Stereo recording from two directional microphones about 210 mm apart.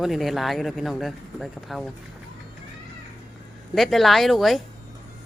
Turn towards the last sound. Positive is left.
turn(degrees=0)  # may be behind; listen again after turning